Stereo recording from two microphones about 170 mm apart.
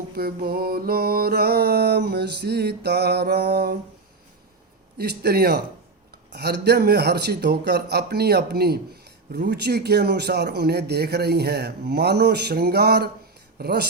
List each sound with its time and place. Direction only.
0.1 s music: 65° right (ahead or behind)
4.9 s music: 70° right (ahead or behind)